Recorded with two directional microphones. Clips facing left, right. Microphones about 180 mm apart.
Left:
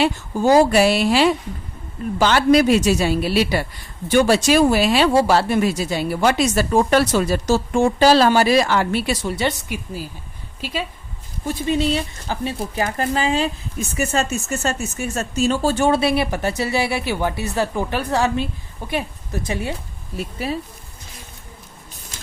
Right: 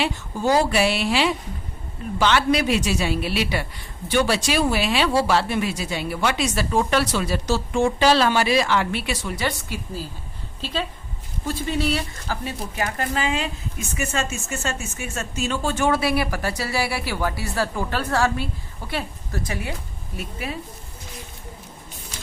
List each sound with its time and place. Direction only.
0.0 s a woman's voice: 45° left (ahead or behind); by 9.6 s 25° left (ahead or behind)
9.6 s a woman's voice: 15° left (ahead or behind); by 20.6 s 35° left (ahead or behind)